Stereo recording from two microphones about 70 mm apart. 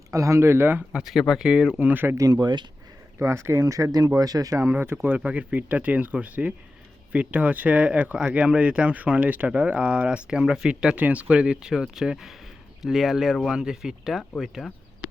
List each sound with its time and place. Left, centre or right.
0.1 s speech: right
0.9 s speech: centre
1.8 s speech: right
2.1 s speech: right
3.2 s speech: right
3.6 s speech: right
4.5 s speech: right
5.1 s speech: right
10.9 s speech: right; by 14.6 s centre